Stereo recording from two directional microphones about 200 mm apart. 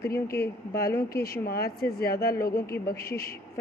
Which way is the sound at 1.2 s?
50° left (ahead or behind).